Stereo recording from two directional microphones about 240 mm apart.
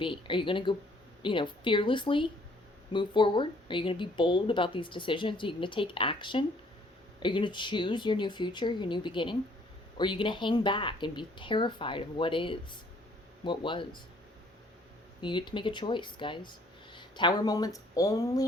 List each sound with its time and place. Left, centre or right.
0.0 s speech: left
15.2 s speech: centre